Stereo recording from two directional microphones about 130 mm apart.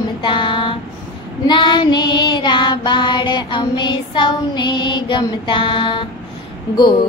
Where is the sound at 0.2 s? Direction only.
40° left (ahead or behind).